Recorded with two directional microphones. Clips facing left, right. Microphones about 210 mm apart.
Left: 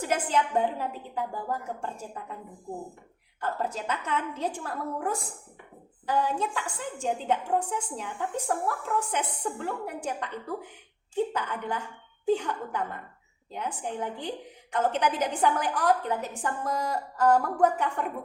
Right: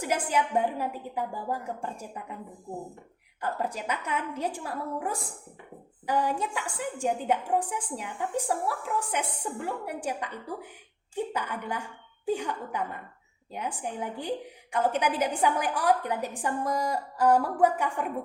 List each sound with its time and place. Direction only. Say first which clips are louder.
0.0 s a woman's voice: left 1 dB; 10° right (ahead or behind)
3.4 s a woman's voice: even; 15° right (ahead or behind)